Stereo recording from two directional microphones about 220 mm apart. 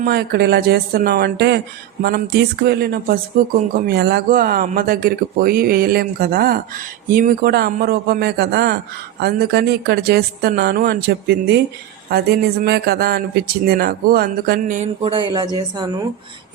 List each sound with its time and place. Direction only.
0.0 s speech: 45° right (ahead or behind)
15.1 s speech: 20° right (ahead or behind)